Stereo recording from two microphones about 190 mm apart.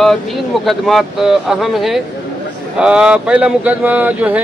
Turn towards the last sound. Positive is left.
turn(degrees=-10)  # may be behind; listen again after turning